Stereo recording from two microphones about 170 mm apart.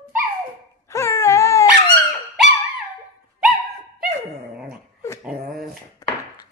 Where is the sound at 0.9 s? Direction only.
15° left (ahead or behind).